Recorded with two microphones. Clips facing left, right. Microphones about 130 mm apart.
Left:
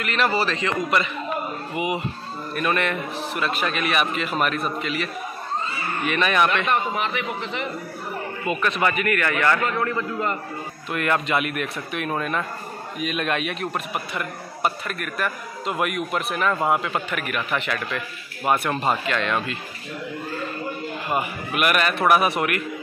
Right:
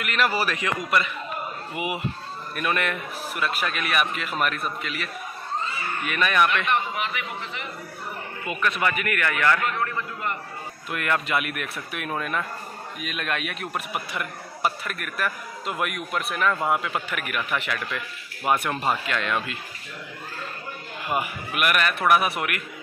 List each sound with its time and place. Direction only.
0.0 s a man's voice: 5° right (ahead or behind)
6.4 s a man's voice: 35° left (ahead or behind)
8.5 s a man's voice: 25° left (ahead or behind)
8.8 s a man's voice: 5° right (ahead or behind)
10.9 s a man's voice: 5° right (ahead or behind)
17.1 s a man's voice: 5° right (ahead or behind)
21.1 s a man's voice: 5° right (ahead or behind)